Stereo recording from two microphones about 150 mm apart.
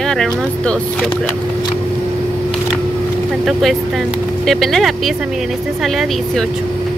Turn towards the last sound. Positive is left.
turn(degrees=0)  # may be behind; listen again after turning